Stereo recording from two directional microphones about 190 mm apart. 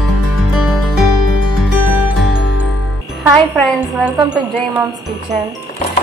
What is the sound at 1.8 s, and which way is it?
Music, 10° right (ahead or behind).